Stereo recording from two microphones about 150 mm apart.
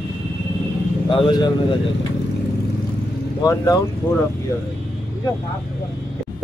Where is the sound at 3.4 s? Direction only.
25° left (ahead or behind).